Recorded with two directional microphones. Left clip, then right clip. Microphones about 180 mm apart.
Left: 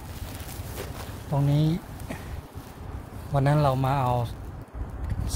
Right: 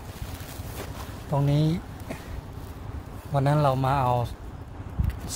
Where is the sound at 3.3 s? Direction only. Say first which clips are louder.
Even; 20° left (ahead or behind).